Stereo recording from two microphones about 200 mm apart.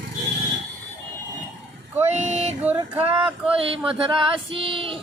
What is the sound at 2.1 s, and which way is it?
Music, 35° right (ahead or behind).